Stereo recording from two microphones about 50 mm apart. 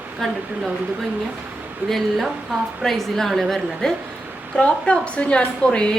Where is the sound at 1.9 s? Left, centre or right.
Centre.